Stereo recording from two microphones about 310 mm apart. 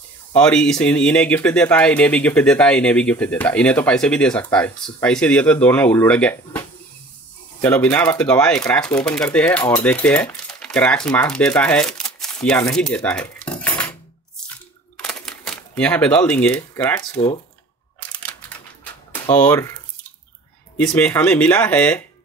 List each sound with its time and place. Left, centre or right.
0.3 s speech: centre
7.6 s speech: centre
12.4 s cutlery: centre
15.0 s camera: centre
19.1 s speech: centre
20.7 s speech: centre